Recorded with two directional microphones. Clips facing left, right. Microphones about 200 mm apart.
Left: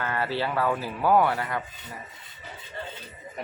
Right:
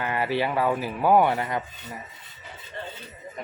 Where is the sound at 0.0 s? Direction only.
15° right (ahead or behind).